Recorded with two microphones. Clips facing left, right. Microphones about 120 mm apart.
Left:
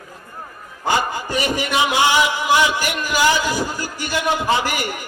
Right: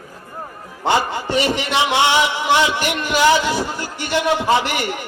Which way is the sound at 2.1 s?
25° right (ahead or behind).